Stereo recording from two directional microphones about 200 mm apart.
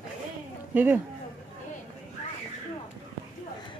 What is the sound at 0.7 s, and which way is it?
Speech, 10° right (ahead or behind).